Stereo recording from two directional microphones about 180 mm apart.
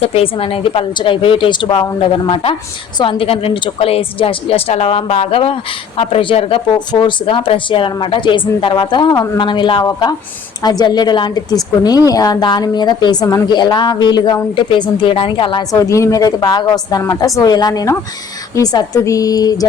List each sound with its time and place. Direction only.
0.0 s a woman's voice: 30° left (ahead or behind)